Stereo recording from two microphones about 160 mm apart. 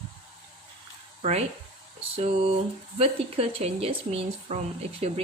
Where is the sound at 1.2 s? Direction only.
40° right (ahead or behind).